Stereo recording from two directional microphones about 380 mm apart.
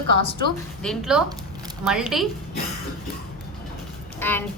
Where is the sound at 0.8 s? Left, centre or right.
Centre.